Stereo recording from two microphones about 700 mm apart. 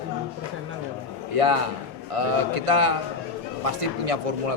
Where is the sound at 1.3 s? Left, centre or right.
Right.